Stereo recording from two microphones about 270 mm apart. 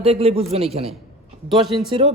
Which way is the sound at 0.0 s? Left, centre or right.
Right.